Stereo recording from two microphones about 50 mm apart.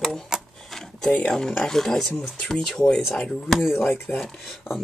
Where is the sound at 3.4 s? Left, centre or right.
Centre.